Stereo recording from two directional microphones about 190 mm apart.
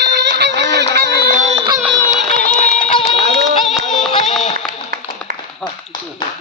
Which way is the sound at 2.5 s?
40° left (ahead or behind).